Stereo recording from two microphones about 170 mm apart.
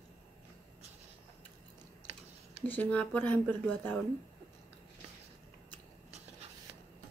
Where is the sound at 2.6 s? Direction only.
10° left (ahead or behind).